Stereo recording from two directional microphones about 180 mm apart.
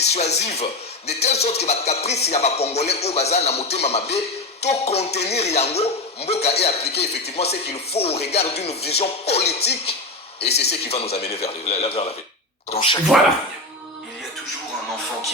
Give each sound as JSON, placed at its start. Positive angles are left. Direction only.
{"t": 0.1, "sound": "speech", "side_deg": 35}
{"t": 10.5, "sound": "speech", "side_deg": 65}
{"t": 10.8, "sound": "speech", "side_deg": 35}